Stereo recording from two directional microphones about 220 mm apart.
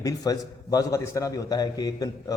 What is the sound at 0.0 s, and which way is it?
A man's voice, 15° left (ahead or behind).